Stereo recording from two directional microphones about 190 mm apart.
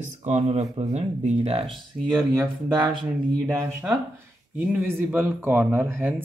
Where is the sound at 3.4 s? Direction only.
10° right (ahead or behind).